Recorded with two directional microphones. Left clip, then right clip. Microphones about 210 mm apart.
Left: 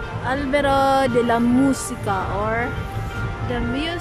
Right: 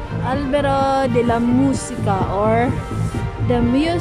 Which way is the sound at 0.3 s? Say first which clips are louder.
Right 1 dB; centre (ahead or behind).